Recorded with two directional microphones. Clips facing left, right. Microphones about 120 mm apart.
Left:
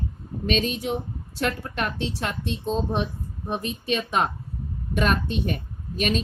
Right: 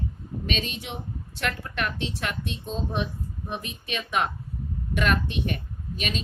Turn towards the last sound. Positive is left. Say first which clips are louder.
# left 6 dB
turn(degrees=40)  # may be behind; listen again after turning